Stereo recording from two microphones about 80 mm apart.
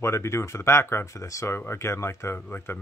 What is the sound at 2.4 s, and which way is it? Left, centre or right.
Speech, left.